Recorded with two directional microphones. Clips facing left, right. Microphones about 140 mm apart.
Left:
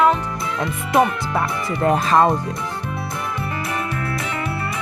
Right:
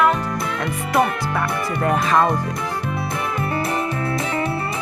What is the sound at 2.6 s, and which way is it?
Music, 70° right (ahead or behind).